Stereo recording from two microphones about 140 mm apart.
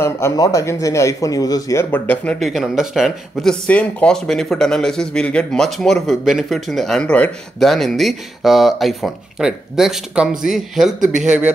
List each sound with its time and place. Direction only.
0.0 s speech: 20° left (ahead or behind); by 3.5 s 5° right (ahead or behind)
3.6 s a man's voice: 10° left (ahead or behind); by 11.5 s 10° right (ahead or behind)